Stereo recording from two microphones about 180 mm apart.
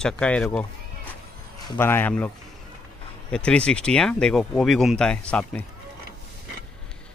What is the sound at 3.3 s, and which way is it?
Speech, 5° left (ahead or behind).